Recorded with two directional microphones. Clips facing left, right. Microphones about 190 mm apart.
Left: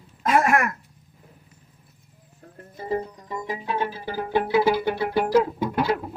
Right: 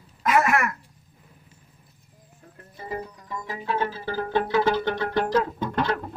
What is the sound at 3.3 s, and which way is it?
Music, 20° left (ahead or behind).